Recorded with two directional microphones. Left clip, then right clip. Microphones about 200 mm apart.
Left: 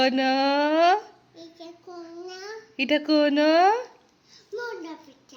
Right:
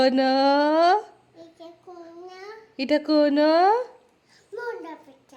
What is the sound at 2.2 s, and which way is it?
A child's voice, 15° right (ahead or behind).